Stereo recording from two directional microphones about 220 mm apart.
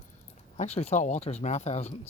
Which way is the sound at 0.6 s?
30° left (ahead or behind).